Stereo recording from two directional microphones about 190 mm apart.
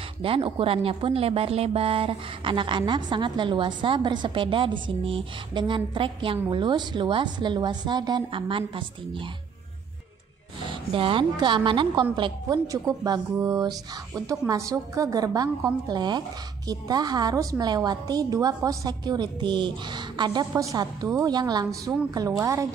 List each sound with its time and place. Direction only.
0.2 s speech: 30° right (ahead or behind)
10.7 s speech: 30° right (ahead or behind)